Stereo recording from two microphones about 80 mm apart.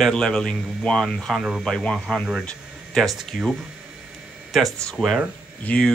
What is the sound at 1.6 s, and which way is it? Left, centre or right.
Speech, centre.